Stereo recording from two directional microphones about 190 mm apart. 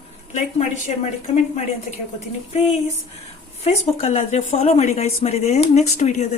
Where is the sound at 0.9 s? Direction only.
35° left (ahead or behind).